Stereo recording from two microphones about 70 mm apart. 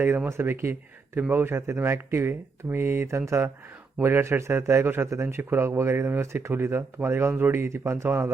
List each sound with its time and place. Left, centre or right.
0.3 s speech: right